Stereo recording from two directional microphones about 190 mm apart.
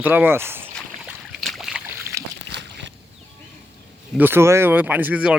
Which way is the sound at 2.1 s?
15° right (ahead or behind).